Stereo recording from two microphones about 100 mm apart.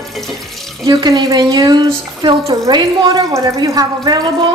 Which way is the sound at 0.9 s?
45° right (ahead or behind).